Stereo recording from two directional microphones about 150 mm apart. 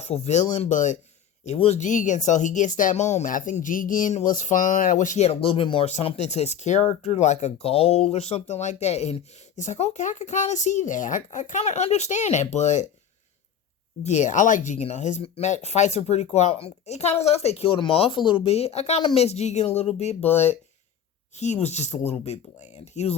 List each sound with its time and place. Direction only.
0.0 s speech: 50° left (ahead or behind)
1.5 s speech: 45° left (ahead or behind)
14.0 s speech: 50° left (ahead or behind)
20.2 s speech: 15° left (ahead or behind)
21.3 s speech: 50° left (ahead or behind)